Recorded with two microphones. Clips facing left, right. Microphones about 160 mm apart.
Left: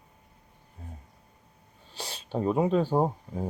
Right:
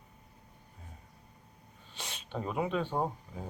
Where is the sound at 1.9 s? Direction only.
35° left (ahead or behind).